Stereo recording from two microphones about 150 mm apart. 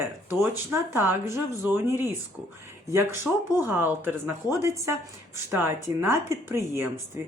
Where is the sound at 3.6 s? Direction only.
15° right (ahead or behind).